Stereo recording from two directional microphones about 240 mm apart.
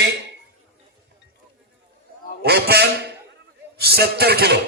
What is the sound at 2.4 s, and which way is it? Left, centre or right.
A man's voice, right.